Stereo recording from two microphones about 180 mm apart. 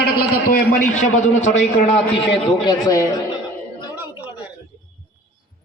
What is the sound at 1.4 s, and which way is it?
Speech, 40° left (ahead or behind).